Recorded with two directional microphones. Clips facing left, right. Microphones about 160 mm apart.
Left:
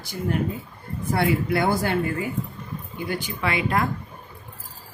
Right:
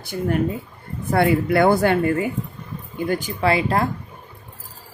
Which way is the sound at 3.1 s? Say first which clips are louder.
Right 6 dB; 35° right (ahead or behind).